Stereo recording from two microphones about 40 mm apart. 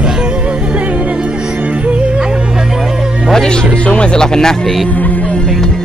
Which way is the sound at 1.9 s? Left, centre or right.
Right.